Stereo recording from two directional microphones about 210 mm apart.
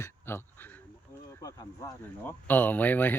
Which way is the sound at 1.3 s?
15° left (ahead or behind).